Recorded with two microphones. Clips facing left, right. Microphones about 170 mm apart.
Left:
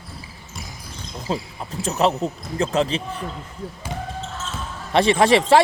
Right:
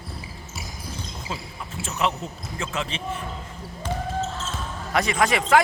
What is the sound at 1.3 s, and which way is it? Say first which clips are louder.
Speech: left 9 dB; 35° left (ahead or behind).